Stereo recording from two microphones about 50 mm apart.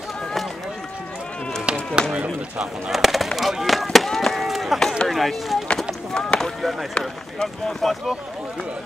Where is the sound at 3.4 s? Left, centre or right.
Centre.